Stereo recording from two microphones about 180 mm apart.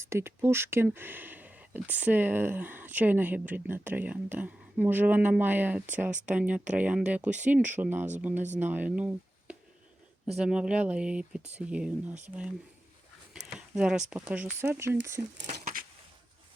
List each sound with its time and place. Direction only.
0.0 s speech: 15° right (ahead or behind)
6.1 s speech: 40° right (ahead or behind)
6.3 s speech: 10° right (ahead or behind)
15.5 s a sound: 50° right (ahead or behind)